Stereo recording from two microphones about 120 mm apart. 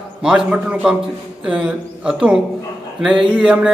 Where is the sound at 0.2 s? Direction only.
5° right (ahead or behind).